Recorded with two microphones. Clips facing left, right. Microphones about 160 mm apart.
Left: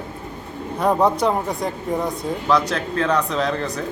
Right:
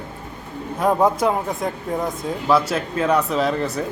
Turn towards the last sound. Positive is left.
turn(degrees=-5)  # may be behind; listen again after turning